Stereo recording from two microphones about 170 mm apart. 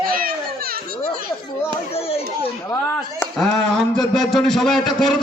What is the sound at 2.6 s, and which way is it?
Speech, 15° left (ahead or behind).